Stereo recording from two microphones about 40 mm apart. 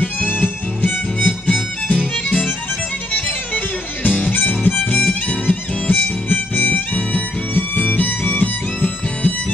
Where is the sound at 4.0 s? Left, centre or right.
Left.